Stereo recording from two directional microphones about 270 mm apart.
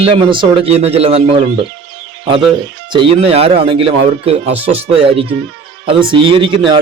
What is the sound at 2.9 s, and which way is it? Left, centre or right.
Speech, centre.